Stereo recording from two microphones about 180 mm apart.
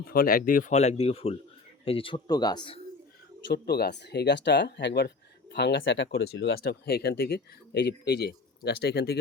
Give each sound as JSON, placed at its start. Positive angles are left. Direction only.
{"t": 0.0, "sound": "speech", "side_deg": 55}
{"t": 3.4, "sound": "speech", "side_deg": 65}